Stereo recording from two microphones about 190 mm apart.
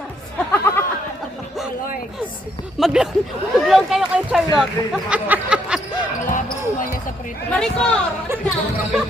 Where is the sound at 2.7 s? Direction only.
5° right (ahead or behind).